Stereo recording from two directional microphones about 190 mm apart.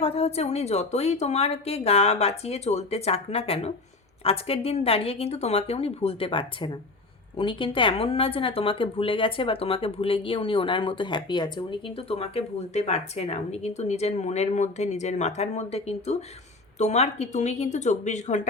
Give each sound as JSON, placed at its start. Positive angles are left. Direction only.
{"t": 0.0, "sound": "a woman's voice", "side_deg": 30}